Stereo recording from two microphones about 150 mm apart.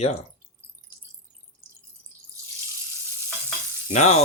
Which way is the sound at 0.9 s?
15° right (ahead or behind).